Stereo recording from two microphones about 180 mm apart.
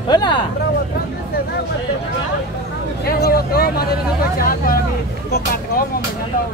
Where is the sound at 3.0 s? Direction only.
60° left (ahead or behind).